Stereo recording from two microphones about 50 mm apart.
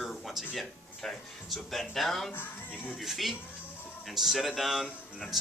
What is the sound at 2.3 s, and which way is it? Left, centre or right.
Speech, left.